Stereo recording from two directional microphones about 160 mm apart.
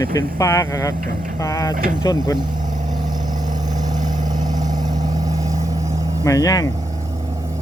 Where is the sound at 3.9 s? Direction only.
25° right (ahead or behind).